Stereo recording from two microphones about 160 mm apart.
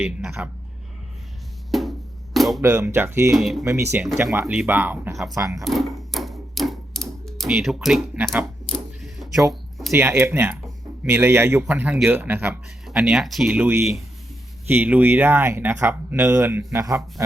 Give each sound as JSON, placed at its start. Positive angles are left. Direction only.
{"t": 0.0, "sound": "speech", "side_deg": -5}
{"t": 1.7, "sound": "music", "side_deg": 0}
{"t": 2.6, "sound": "speech", "side_deg": -15}
{"t": 3.3, "sound": "speech", "side_deg": 0}
{"t": 3.6, "sound": "a man's voice", "side_deg": -20}
{"t": 5.1, "sound": "speech", "side_deg": 0}
{"t": 5.4, "sound": "a man's voice", "side_deg": -20}
{"t": 5.6, "sound": "typewriter", "side_deg": 0}
{"t": 8.7, "sound": "power windows", "side_deg": 0}
{"t": 9.9, "sound": "speech", "side_deg": -15}
{"t": 12.9, "sound": "a man's voice", "side_deg": 0}